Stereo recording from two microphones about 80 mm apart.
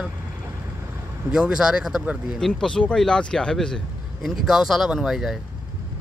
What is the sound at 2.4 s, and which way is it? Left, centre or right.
Speech, centre.